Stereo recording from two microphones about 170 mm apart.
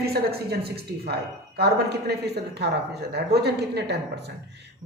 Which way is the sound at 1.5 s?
70° right (ahead or behind).